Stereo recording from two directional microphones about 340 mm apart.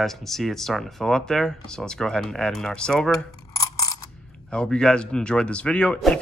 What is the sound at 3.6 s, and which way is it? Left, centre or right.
Coin, centre.